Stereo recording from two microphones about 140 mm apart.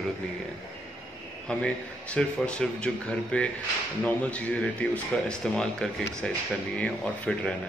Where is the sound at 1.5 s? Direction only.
5° left (ahead or behind).